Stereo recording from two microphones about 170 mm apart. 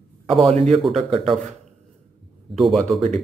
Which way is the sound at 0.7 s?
Centre (ahead or behind).